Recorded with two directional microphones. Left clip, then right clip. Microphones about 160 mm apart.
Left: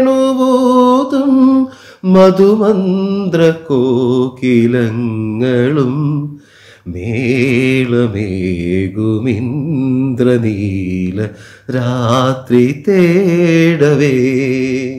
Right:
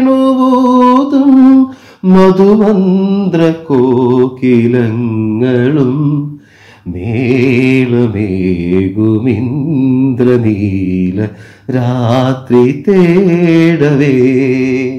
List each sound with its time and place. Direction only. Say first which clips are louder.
0.0 s mantra: right 1 dB; 25° left (ahead or behind)
7.1 s mantra: right 3 dB; 25° left (ahead or behind)